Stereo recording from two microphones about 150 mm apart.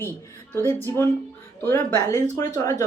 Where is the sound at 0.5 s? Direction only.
15° left (ahead or behind).